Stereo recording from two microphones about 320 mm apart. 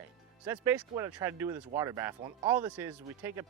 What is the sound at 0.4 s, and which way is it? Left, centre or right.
Speech, centre.